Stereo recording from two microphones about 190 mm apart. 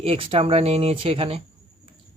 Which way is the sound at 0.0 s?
30° right (ahead or behind).